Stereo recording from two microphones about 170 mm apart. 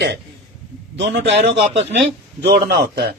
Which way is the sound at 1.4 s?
90° right.